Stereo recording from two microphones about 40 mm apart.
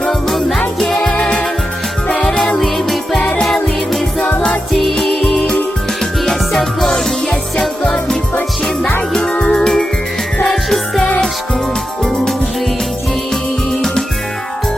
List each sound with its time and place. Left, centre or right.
0.0 s jingle bell: centre
0.8 s music: centre
2.6 s music: centre
9.4 s music: centre
13.3 s music: centre